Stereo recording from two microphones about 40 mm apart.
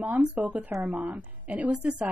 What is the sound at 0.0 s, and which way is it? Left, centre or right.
Speech, right.